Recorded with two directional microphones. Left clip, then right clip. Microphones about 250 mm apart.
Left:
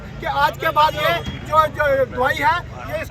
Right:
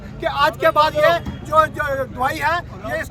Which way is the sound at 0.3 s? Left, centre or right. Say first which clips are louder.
Right 2 dB; right.